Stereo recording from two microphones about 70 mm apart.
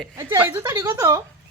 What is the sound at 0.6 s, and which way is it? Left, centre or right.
Speech, right.